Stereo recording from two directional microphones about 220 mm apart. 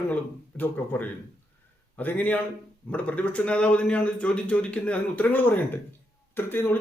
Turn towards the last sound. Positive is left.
turn(degrees=10)  # may be behind; listen again after turning